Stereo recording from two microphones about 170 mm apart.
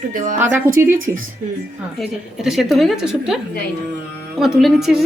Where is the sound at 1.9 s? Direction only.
Centre (ahead or behind).